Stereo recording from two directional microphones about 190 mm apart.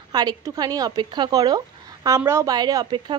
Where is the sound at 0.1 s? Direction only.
20° right (ahead or behind).